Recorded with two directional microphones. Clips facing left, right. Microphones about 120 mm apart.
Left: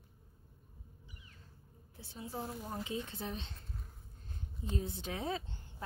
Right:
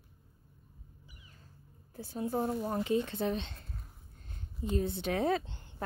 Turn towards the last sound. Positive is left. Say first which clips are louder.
# right 7 dB
turn(degrees=-70)  # may be behind; listen again after turning